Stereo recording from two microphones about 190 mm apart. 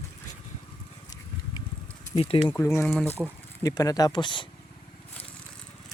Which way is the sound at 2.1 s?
30° left (ahead or behind).